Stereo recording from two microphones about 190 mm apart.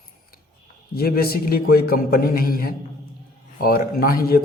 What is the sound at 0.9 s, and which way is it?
A man's voice, 55° left (ahead or behind).